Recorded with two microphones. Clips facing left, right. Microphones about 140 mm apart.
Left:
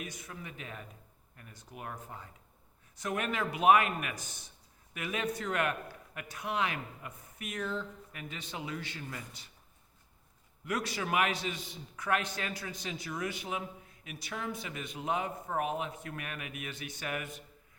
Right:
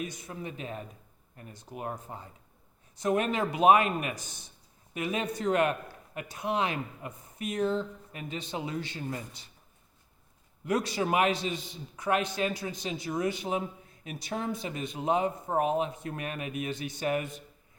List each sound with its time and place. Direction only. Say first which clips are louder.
0.0 s a man's voice: right 6 dB; 30° right (ahead or behind)
4.2 s a man's voice: right 1 dB; 10° left (ahead or behind)
4.9 s a man's voice: right 4 dB; 25° right (ahead or behind)
10.7 s a man's voice: right 6 dB; 30° right (ahead or behind)